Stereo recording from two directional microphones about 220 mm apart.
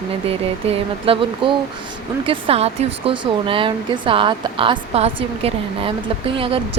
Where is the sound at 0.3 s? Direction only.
25° right (ahead or behind).